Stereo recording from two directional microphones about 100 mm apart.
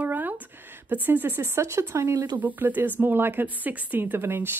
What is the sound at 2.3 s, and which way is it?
Speech, 15° right (ahead or behind).